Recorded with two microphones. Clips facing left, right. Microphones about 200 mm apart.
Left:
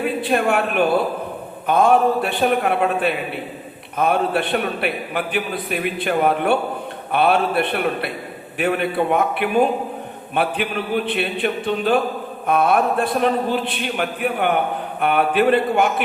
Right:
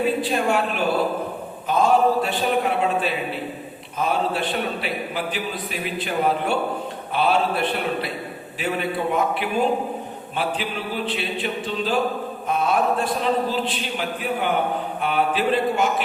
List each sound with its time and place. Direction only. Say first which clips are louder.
0.0 s a man's voice: left 2 dB; 60° left (ahead or behind)